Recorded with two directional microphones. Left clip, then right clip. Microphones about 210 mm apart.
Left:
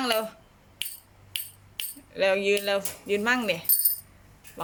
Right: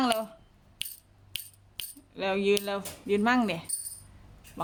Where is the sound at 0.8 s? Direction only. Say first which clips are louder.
Left 3 dB; 55° right (ahead or behind).